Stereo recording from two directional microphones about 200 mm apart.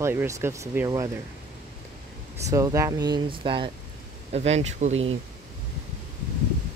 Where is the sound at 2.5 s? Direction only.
15° right (ahead or behind); by 5.1 s 35° right (ahead or behind).